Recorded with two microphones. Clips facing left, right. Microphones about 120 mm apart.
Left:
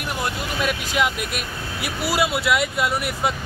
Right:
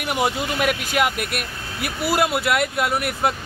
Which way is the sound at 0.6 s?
55° right (ahead or behind).